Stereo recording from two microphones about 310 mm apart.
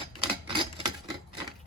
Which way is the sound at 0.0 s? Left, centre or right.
Centre.